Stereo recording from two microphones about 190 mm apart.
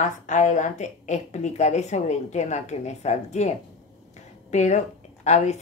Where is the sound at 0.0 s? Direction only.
40° left (ahead or behind).